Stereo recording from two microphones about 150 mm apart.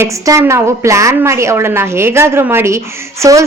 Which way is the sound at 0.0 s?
20° right (ahead or behind).